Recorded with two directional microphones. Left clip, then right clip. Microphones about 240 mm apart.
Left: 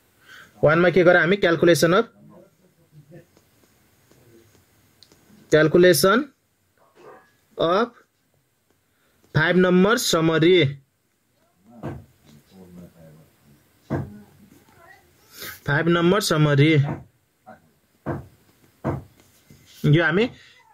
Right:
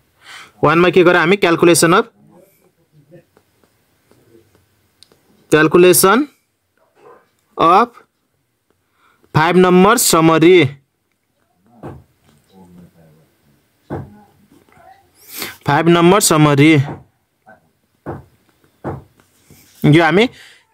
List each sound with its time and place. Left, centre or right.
0.3 s speech: right
5.5 s speech: right
7.5 s speech: right
9.3 s speech: right
15.3 s speech: right
19.8 s speech: right